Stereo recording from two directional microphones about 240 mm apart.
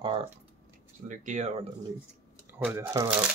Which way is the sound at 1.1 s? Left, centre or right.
Right.